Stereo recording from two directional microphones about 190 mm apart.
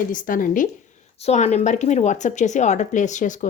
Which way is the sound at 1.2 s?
35° left (ahead or behind).